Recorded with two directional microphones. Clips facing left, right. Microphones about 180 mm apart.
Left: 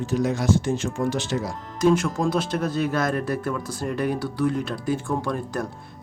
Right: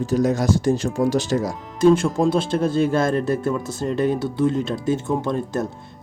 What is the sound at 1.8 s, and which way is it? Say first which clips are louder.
Speech: right 4 dB; 30° right (ahead or behind).